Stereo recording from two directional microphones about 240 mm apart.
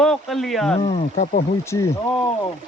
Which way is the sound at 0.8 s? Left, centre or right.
Left.